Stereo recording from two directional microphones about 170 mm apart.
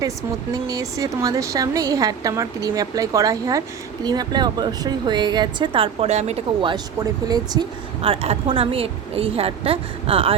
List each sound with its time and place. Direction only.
0.5 s a woman's voice: 20° right (ahead or behind)
8.0 s a woman's voice: 35° right (ahead or behind)